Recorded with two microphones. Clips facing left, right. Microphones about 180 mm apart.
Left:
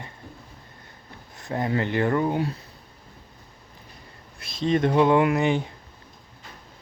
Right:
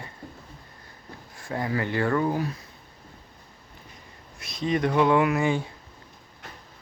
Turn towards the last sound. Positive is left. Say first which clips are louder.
# left 2 dB
turn(degrees=20)  # may be behind; listen again after turning